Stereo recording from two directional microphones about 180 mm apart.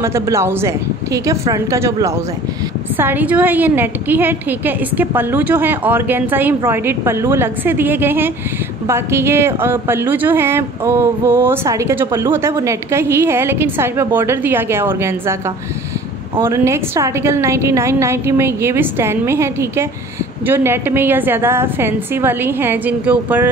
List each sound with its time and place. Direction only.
0.0 s speech: 15° right (ahead or behind)